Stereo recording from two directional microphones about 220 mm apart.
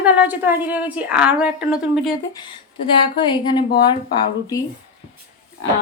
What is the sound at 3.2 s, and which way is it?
Speech, 20° left (ahead or behind).